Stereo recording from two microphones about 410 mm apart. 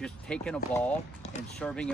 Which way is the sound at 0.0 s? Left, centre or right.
Centre.